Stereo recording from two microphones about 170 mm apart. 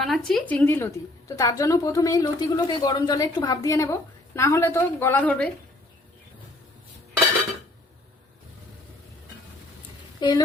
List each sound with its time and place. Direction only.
0.0 s speech: 5° left (ahead or behind)
10.2 s speech: 25° left (ahead or behind)